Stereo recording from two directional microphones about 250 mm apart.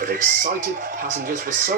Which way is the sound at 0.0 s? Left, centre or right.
Right.